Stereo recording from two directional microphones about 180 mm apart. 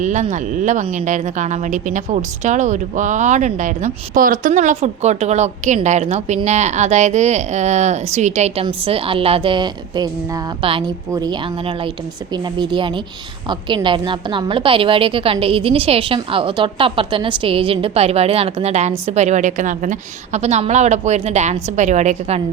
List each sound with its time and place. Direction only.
0.0 s a woman's voice: 40° right (ahead or behind)